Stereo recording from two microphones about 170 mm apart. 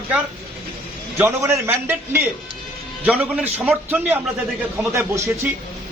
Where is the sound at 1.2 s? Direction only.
15° right (ahead or behind).